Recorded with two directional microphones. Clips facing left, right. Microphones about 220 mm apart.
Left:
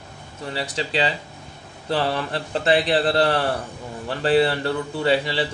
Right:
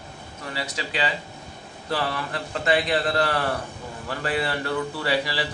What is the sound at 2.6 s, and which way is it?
A man's voice, 30° left (ahead or behind).